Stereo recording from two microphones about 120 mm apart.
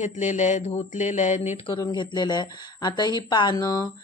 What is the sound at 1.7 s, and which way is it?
Speech, 40° left (ahead or behind).